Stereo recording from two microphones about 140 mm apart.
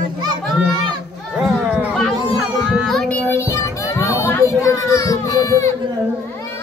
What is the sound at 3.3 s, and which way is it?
Children playing, 20° left (ahead or behind).